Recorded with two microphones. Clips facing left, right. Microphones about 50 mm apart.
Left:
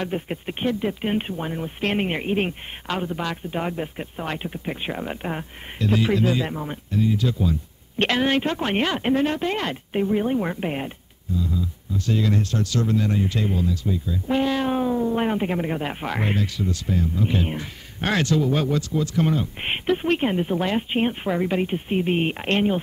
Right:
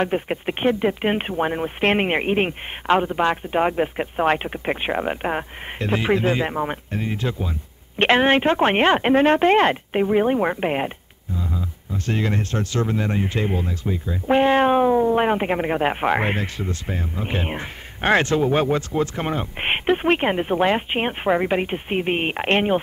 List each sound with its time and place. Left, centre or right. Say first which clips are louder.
0.0 s speech: right 5 dB; right